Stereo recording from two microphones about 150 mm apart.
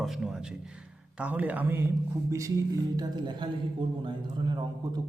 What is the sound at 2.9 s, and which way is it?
A man's voice, 30° right (ahead or behind).